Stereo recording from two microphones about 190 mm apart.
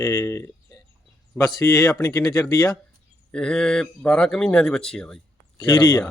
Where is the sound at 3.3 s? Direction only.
5° left (ahead or behind).